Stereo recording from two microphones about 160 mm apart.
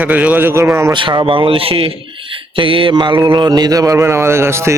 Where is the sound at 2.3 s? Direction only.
35° right (ahead or behind).